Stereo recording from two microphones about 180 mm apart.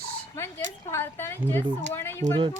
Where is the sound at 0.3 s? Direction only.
15° left (ahead or behind).